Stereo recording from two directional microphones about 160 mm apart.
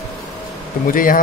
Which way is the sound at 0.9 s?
60° left (ahead or behind).